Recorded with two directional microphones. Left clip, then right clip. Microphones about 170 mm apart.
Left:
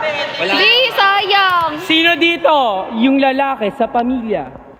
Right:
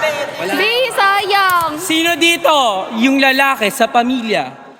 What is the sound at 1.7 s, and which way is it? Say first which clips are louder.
A man's voice: left 2 dB; 30° left (ahead or behind).